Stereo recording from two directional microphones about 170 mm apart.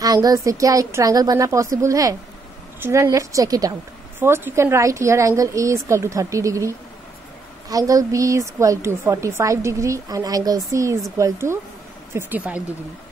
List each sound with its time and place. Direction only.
0.0 s a woman's voice: 20° right (ahead or behind)
7.7 s a woman's voice: 20° right (ahead or behind)